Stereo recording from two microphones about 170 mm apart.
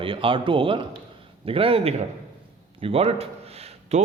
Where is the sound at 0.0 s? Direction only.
30° right (ahead or behind).